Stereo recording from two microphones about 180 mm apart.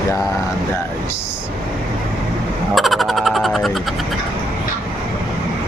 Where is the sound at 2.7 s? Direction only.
Centre (ahead or behind).